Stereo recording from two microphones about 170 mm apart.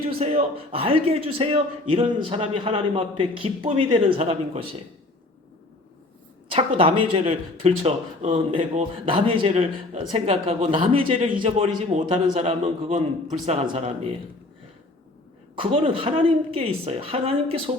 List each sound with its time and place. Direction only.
0.2 s a man's voice: 35° right (ahead or behind)
6.5 s a man's voice: 30° right (ahead or behind)
15.5 s a man's voice: 35° right (ahead or behind)